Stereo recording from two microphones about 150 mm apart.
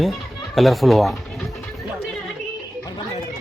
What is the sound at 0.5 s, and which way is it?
Speech, centre (ahead or behind).